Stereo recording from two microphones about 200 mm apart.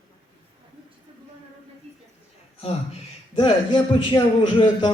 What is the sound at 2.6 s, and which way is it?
A man's voice, 30° left (ahead or behind).